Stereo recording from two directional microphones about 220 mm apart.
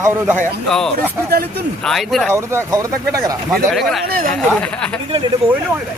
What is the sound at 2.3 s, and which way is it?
Speech, 10° right (ahead or behind).